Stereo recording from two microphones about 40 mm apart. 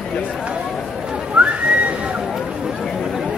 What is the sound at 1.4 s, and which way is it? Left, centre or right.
Whistling, right.